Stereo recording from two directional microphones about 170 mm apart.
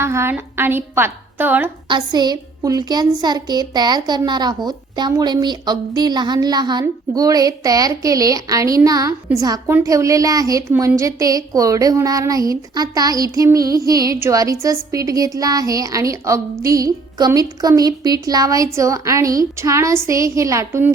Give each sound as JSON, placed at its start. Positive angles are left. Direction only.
{"t": 0.0, "sound": "a woman's voice", "side_deg": -15}
{"t": 1.9, "sound": "a woman's voice", "side_deg": -25}